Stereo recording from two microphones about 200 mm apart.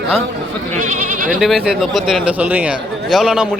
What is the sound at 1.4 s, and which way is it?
Speech, centre (ahead or behind).